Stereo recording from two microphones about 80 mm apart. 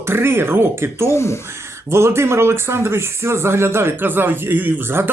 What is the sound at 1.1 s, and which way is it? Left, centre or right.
Speech, left.